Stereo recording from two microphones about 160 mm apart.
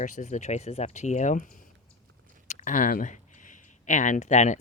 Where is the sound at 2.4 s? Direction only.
55° left (ahead or behind).